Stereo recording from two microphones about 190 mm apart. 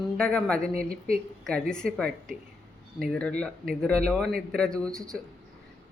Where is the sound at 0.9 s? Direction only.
50° right (ahead or behind).